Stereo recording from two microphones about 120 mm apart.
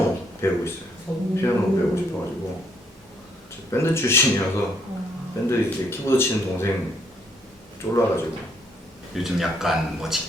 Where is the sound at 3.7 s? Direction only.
20° left (ahead or behind).